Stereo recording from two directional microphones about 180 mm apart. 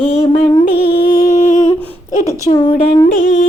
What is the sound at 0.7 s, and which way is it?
Music, 60° left (ahead or behind).